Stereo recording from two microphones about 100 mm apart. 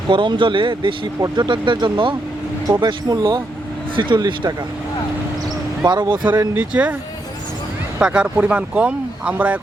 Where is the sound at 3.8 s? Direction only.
55° right (ahead or behind).